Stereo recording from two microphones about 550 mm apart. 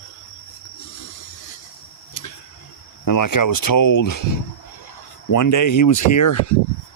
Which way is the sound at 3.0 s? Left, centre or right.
Left.